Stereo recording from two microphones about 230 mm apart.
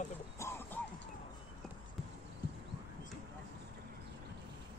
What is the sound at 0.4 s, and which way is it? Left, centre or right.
Music, centre.